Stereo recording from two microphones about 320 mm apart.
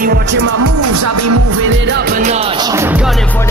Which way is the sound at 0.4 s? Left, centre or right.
Right.